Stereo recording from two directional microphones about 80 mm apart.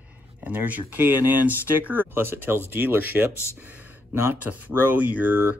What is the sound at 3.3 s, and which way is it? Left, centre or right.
Speech, left.